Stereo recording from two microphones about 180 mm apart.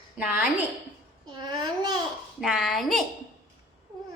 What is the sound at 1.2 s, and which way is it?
Speech, 25° right (ahead or behind).